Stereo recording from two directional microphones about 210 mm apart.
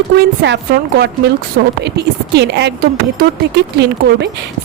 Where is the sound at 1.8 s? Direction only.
55° right (ahead or behind).